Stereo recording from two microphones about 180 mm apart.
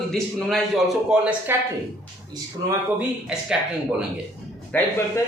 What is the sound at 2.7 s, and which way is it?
Speech, 5° right (ahead or behind).